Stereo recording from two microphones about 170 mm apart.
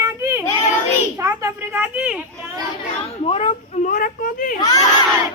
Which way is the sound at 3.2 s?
35° left (ahead or behind).